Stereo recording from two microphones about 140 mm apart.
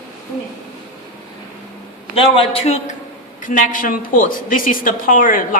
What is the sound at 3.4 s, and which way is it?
A woman's voice, 70° left (ahead or behind).